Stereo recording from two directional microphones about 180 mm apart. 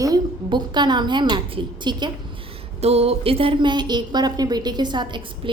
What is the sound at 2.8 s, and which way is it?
A woman's voice, 35° right (ahead or behind).